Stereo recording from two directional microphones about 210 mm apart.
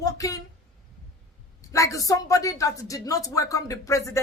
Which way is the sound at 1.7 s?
15° left (ahead or behind).